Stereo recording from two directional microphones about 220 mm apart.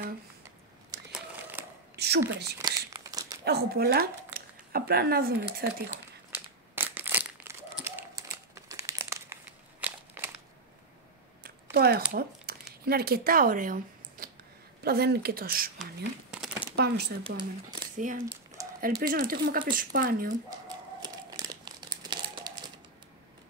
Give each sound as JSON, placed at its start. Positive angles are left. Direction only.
{"t": 1.1, "sound": "crumpling", "side_deg": -5}
{"t": 2.0, "sound": "a woman's voice", "side_deg": -50}
{"t": 2.6, "sound": "crumpling", "side_deg": -15}
{"t": 3.4, "sound": "speech", "side_deg": -45}
{"t": 6.3, "sound": "crumpling", "side_deg": -10}
{"t": 11.7, "sound": "a sound", "side_deg": -45}
{"t": 14.8, "sound": "a woman's voice", "side_deg": -45}
{"t": 15.8, "sound": "speech", "side_deg": 0}
{"t": 16.7, "sound": "a woman's voice", "side_deg": -45}
{"t": 17.4, "sound": "speech", "side_deg": -20}
{"t": 17.9, "sound": "speech", "side_deg": -35}
{"t": 20.6, "sound": "a sound", "side_deg": -15}
{"t": 21.5, "sound": "crumpling", "side_deg": -20}